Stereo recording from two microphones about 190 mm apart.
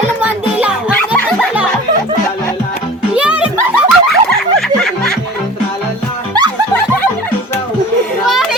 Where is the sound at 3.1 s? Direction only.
5° right (ahead or behind).